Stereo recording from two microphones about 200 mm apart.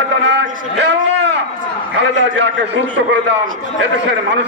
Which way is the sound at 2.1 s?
65° right (ahead or behind).